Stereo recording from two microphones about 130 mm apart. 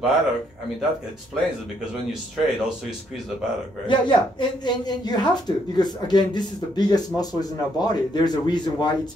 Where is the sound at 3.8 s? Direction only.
35° left (ahead or behind).